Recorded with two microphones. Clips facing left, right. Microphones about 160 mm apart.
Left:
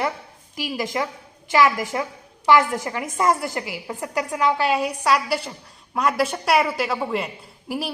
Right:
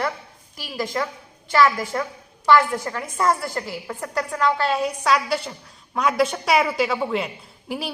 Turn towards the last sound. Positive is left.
turn(degrees=0)  # may be behind; listen again after turning